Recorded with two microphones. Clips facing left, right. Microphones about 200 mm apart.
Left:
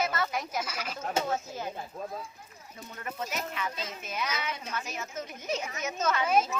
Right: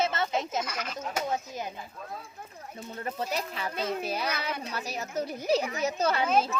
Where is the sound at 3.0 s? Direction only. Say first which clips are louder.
Right 3 dB; 35° right (ahead or behind).